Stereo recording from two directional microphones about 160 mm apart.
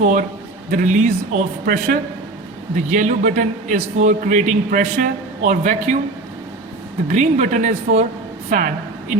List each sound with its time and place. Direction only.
0.0 s a man's voice: 50° right (ahead or behind)
7.1 s a man's voice: 50° right (ahead or behind)
8.4 s a woman's voice: 55° right (ahead or behind)